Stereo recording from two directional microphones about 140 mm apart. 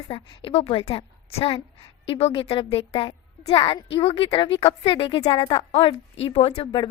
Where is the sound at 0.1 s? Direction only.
40° left (ahead or behind).